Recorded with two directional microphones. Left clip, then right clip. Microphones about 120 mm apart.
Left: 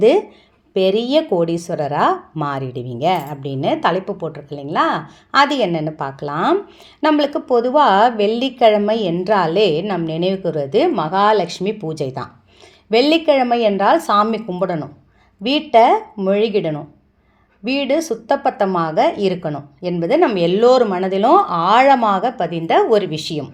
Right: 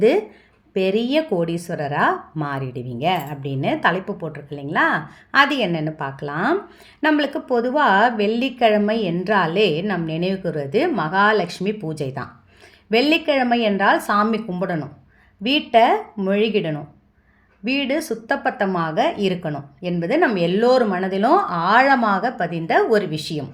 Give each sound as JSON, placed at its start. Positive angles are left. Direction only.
{"t": 0.7, "sound": "a woman's voice", "side_deg": 25}